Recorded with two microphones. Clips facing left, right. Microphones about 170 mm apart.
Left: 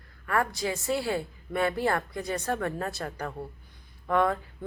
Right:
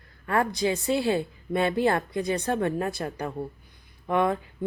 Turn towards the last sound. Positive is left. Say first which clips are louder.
# right 1 dB
turn(degrees=-20)  # may be behind; listen again after turning